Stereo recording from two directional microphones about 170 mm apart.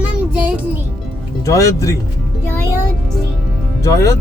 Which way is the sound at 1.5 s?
20° left (ahead or behind).